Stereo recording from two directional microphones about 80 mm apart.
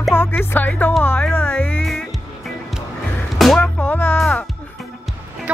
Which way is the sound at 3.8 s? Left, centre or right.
Left.